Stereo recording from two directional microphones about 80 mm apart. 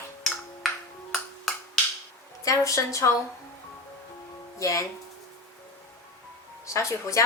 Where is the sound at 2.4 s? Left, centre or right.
Left.